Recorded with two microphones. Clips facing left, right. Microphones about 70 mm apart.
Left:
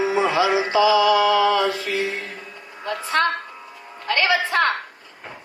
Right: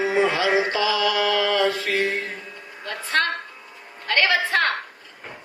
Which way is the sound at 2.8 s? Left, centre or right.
Left.